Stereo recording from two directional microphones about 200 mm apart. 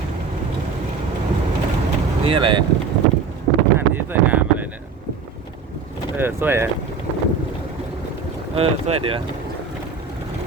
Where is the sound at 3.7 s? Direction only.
10° right (ahead or behind).